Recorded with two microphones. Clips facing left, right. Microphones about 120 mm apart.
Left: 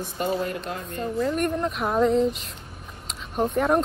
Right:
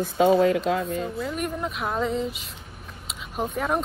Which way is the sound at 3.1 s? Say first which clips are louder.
Left 4 dB; centre (ahead or behind).